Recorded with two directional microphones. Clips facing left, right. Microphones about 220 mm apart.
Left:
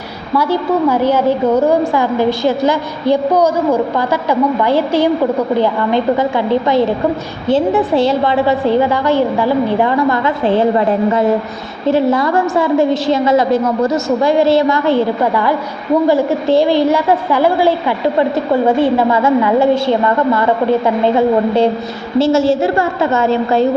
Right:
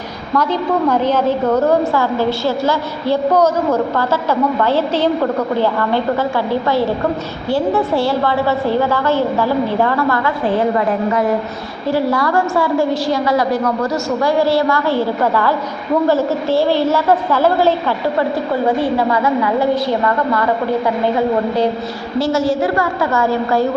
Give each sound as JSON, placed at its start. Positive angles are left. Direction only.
{"t": 0.3, "sound": "a woman's voice", "side_deg": 10}
{"t": 18.8, "sound": "a woman's voice", "side_deg": 25}
{"t": 22.2, "sound": "a woman's voice", "side_deg": 25}